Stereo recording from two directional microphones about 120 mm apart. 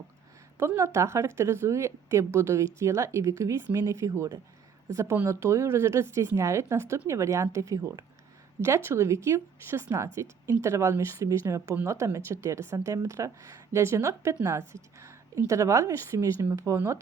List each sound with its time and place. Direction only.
0.6 s speech: 25° right (ahead or behind)